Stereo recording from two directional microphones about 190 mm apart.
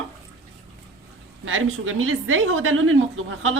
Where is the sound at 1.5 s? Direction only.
90° right.